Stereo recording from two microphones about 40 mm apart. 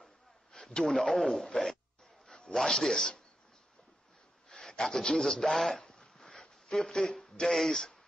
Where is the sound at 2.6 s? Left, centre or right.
Centre.